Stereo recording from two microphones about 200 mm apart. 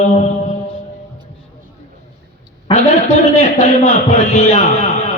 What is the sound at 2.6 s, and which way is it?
A man's voice, 35° left (ahead or behind).